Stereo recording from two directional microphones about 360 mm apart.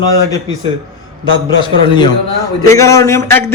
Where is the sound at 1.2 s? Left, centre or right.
Centre.